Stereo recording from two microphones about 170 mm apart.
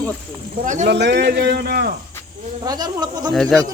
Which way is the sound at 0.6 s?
50° right (ahead or behind).